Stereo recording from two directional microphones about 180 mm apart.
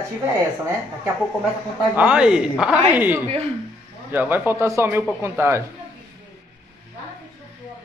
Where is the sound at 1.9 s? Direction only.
5° right (ahead or behind).